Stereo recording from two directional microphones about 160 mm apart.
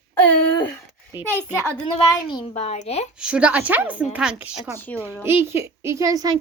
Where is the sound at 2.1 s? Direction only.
25° left (ahead or behind).